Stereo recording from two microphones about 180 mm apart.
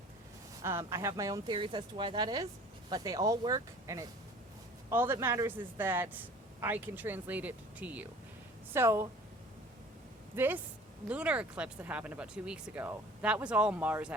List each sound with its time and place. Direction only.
0.6 s a man's voice: 15° right (ahead or behind)
10.3 s a man's voice: 10° right (ahead or behind)